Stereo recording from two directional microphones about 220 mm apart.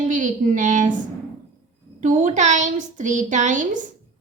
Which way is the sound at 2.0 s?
35° right (ahead or behind).